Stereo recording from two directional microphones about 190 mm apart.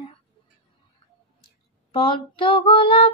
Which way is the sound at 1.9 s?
25° left (ahead or behind).